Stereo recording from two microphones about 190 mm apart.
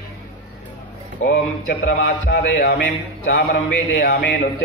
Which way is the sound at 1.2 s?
70° left (ahead or behind).